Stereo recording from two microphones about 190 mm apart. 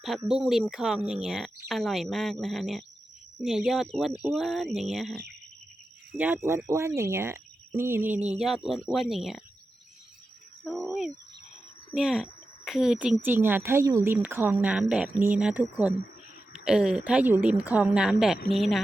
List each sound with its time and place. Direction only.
0.3 s speech: centre (ahead or behind)
10.6 s speech: 5° left (ahead or behind)